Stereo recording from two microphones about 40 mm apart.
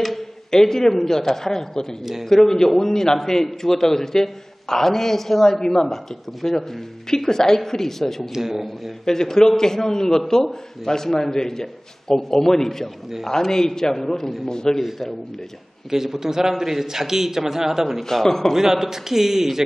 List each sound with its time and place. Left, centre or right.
0.5 s a man's voice: centre
8.3 s a man's voice: centre
9.0 s a man's voice: centre
14.8 s a man's voice: centre
15.9 s a man's voice: centre
18.0 s a man's voice: centre
18.5 s a man's voice: centre